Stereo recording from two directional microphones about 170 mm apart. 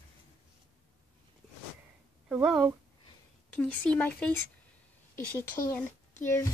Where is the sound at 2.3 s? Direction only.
5° right (ahead or behind).